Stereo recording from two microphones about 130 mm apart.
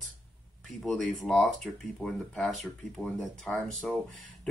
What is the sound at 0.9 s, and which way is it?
Speech, 5° left (ahead or behind).